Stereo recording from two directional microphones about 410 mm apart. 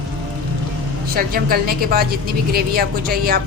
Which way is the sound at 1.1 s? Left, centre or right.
Right.